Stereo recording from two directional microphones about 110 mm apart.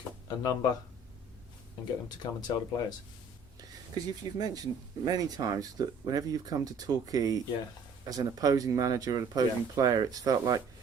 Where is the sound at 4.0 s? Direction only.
35° right (ahead or behind).